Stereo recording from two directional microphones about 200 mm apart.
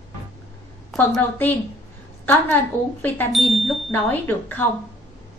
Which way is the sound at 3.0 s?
5° left (ahead or behind).